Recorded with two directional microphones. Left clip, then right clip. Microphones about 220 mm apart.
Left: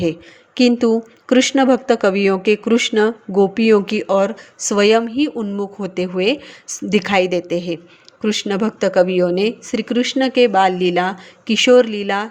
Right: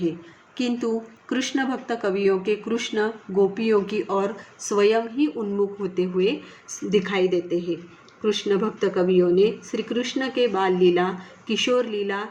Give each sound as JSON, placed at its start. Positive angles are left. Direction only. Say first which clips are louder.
{"t": 0.5, "sound": "speech", "louder": "left 11 dB", "side_deg": 40}